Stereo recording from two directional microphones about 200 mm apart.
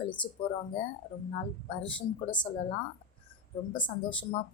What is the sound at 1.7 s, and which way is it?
Speech, 25° left (ahead or behind).